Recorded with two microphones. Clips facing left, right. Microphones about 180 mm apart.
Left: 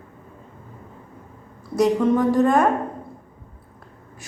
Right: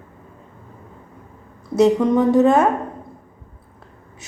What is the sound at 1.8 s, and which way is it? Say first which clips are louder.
Speech: right 3 dB; 20° right (ahead or behind).